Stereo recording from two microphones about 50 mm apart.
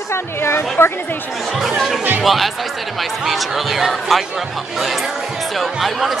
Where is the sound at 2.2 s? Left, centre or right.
Centre.